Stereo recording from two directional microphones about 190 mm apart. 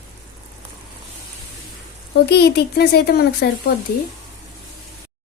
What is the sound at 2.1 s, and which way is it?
Speech, 60° left (ahead or behind).